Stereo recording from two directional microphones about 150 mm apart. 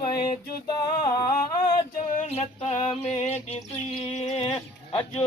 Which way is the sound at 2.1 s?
45° left (ahead or behind).